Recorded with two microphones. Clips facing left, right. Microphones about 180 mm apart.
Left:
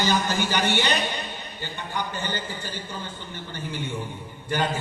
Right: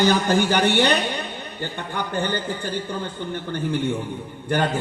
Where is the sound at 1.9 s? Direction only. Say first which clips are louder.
Right 5 dB; 55° right (ahead or behind).